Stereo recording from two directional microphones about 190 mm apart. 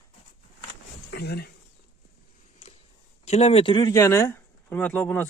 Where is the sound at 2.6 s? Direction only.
35° left (ahead or behind).